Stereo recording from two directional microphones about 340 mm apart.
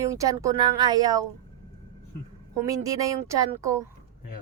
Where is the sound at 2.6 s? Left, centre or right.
Centre.